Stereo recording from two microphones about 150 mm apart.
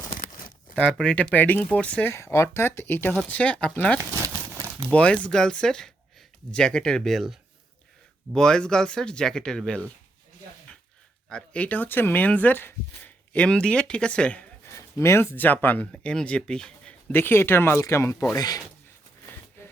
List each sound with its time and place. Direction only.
0.8 s speech: 10° left (ahead or behind)
11.3 s speech: 5° left (ahead or behind)
14.8 s speech: 20° left (ahead or behind)
19.2 s a sound: 15° left (ahead or behind)